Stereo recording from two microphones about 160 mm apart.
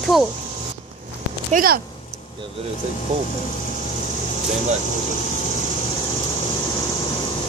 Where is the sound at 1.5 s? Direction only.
65° right (ahead or behind).